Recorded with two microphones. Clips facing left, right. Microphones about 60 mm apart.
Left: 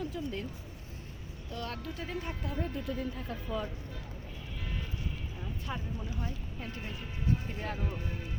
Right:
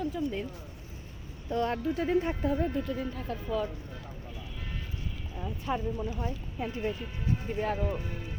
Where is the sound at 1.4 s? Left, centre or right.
Right.